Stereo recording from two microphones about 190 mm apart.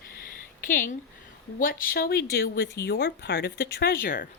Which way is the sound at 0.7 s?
45° left (ahead or behind).